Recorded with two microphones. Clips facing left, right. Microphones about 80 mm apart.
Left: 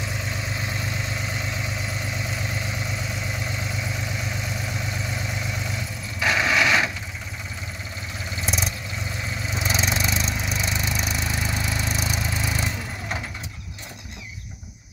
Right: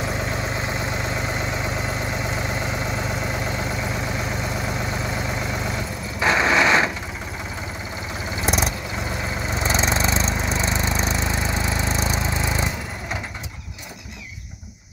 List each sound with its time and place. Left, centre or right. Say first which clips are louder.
0.0 s vehicle: right 5 dB; right
6.1 s a sound: right 3 dB; right
8.5 s vehicle: right 6 dB; right
9.5 s lawn mower: right 3 dB; right